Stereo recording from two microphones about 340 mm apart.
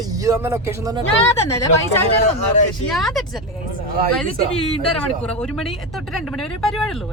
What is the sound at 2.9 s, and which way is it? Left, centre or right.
Speech, centre.